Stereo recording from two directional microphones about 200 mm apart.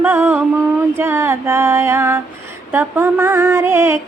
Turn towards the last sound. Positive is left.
turn(degrees=-10)  # may be behind; listen again after turning